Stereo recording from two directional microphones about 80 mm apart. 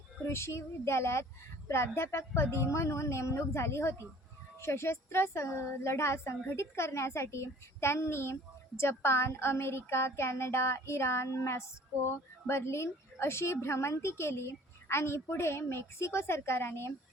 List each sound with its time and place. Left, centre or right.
0.3 s a woman's voice: left